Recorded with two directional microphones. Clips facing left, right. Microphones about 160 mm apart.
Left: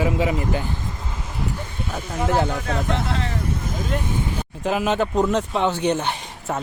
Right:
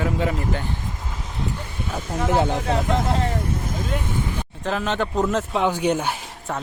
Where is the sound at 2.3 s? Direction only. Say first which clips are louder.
Right 2 dB; 20° right (ahead or behind).